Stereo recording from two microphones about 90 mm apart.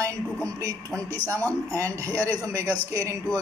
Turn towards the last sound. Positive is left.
turn(degrees=-35)  # may be behind; listen again after turning